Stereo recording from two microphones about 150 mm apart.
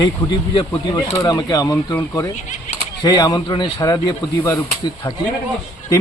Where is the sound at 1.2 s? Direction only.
25° left (ahead or behind).